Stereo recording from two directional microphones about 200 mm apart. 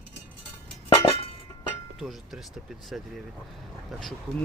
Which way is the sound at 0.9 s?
25° left (ahead or behind).